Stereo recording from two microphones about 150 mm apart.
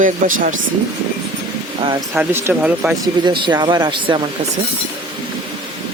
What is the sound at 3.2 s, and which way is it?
Speech, 30° right (ahead or behind).